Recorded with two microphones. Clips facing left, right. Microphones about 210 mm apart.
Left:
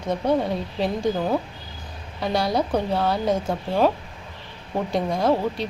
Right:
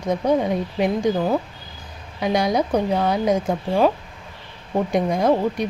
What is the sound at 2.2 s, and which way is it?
A woman's voice, 15° right (ahead or behind).